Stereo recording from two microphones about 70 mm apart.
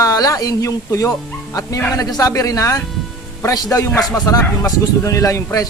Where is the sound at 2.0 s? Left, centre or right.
Left.